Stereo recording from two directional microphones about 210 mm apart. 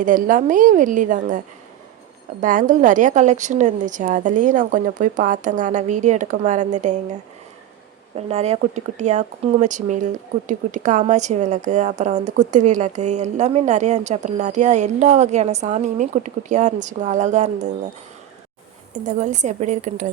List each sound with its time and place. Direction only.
0.0 s speech: 40° right (ahead or behind)
2.4 s speech: 40° right (ahead or behind)
8.3 s speech: 30° right (ahead or behind)
18.9 s speech: 35° right (ahead or behind)